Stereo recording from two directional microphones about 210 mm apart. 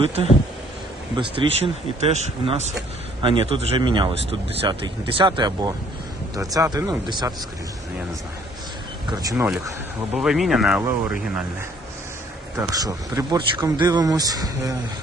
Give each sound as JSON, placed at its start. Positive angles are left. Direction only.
{"t": 1.1, "sound": "speech", "side_deg": -25}
{"t": 9.0, "sound": "speech", "side_deg": -15}
{"t": 10.2, "sound": "speech", "side_deg": 0}
{"t": 12.5, "sound": "speech", "side_deg": -15}